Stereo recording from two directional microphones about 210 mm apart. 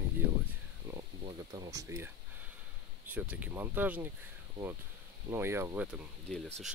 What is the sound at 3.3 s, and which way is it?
Speech, 10° right (ahead or behind).